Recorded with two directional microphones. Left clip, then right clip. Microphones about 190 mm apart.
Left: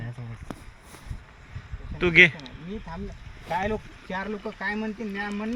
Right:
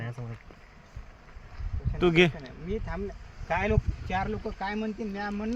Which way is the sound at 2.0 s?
40° right (ahead or behind).